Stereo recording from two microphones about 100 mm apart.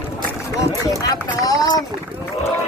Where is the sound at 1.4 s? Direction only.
40° left (ahead or behind).